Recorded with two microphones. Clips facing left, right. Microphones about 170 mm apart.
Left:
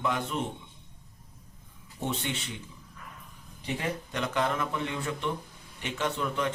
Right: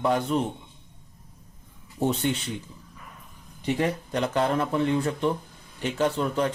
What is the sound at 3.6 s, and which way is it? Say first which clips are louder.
Speech: right 7 dB; 40° right (ahead or behind).